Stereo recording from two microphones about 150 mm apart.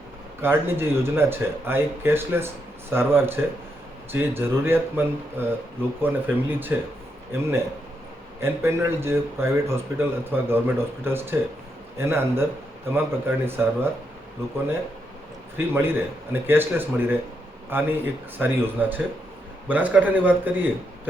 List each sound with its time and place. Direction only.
0.4 s a man's voice: 15° right (ahead or behind)
8.4 s a man's voice: 15° right (ahead or behind)
15.5 s a man's voice: 15° right (ahead or behind)